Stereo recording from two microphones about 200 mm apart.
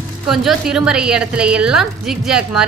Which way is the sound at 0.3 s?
Centre (ahead or behind).